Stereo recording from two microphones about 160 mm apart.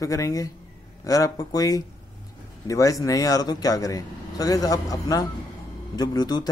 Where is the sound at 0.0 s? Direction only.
20° left (ahead or behind).